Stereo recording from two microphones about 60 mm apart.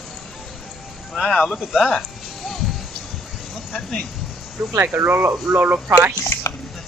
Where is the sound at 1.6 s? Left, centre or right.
Centre.